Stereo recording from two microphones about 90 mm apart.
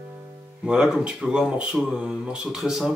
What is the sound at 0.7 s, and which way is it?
Speech, 10° right (ahead or behind).